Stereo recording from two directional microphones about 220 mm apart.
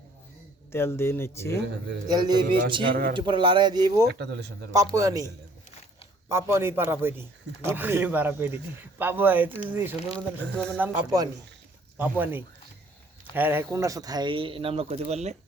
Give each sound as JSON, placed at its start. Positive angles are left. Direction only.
{"t": 0.7, "sound": "speech", "side_deg": 10}
{"t": 2.0, "sound": "speech", "side_deg": -20}
{"t": 2.9, "sound": "speech", "side_deg": -40}
{"t": 3.2, "sound": "speech", "side_deg": -20}
{"t": 4.1, "sound": "speech", "side_deg": -50}
{"t": 4.9, "sound": "a man's voice", "side_deg": -15}
{"t": 6.2, "sound": "a man's voice", "side_deg": -10}